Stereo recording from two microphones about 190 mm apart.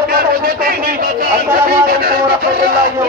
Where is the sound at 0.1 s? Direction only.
50° right (ahead or behind).